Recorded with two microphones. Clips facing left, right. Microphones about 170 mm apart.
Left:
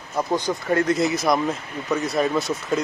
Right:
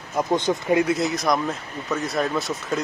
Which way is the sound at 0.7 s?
15° right (ahead or behind).